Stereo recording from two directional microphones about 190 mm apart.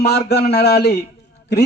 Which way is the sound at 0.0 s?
60° left (ahead or behind).